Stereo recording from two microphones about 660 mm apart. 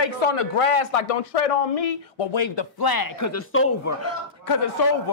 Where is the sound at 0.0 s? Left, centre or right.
Left; by 4.1 s centre.